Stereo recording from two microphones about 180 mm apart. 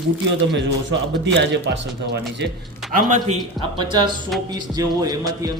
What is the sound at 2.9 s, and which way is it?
Speech, 45° right (ahead or behind).